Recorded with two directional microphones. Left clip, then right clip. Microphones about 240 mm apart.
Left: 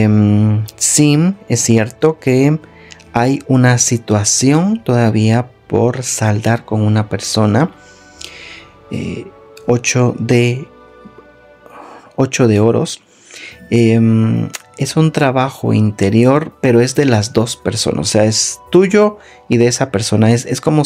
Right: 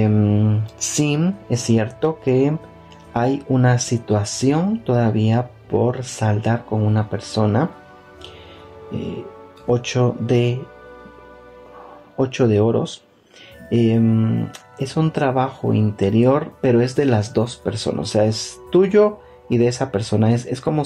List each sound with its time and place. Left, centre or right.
0.0 s speech: left
9.7 s speech: left
12.2 s speech: left